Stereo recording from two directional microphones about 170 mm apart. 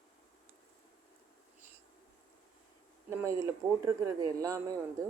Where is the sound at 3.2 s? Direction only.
15° right (ahead or behind).